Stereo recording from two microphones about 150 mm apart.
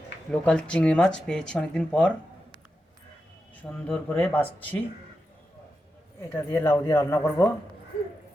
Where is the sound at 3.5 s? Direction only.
10° left (ahead or behind).